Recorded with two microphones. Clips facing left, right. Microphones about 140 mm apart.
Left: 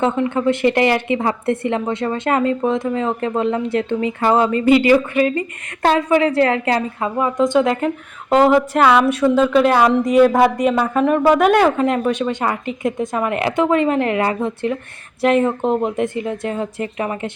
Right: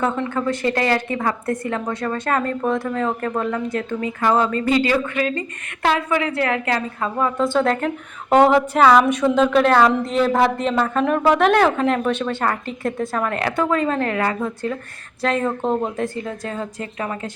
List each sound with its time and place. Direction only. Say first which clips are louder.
0.0 s speech: left 4 dB; 20° left (ahead or behind)
7.0 s a woman's voice: left 2 dB; 15° left (ahead or behind)